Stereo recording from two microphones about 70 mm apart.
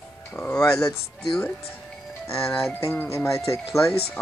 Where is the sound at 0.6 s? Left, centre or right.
Left.